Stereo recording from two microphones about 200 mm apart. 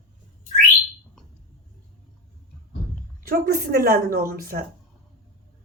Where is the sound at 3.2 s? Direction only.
45° right (ahead or behind).